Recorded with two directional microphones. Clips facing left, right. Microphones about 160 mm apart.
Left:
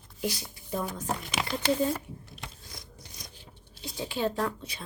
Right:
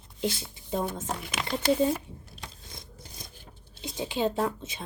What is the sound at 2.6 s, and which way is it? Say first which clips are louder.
Filing: right 1 dB; 25° right (ahead or behind).